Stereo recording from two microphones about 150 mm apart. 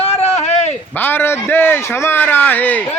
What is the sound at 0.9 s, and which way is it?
A man's voice, 15° left (ahead or behind).